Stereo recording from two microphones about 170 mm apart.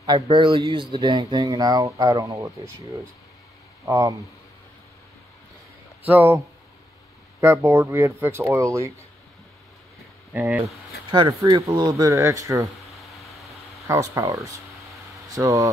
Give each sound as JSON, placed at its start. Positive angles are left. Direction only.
{"t": 0.0, "sound": "speech", "side_deg": -25}
{"t": 3.8, "sound": "speech", "side_deg": -20}
{"t": 6.0, "sound": "speech", "side_deg": -10}
{"t": 10.3, "sound": "speech", "side_deg": -10}
{"t": 11.1, "sound": "speech", "side_deg": -25}
{"t": 12.9, "sound": "a sound", "side_deg": 0}
{"t": 13.8, "sound": "speech", "side_deg": -15}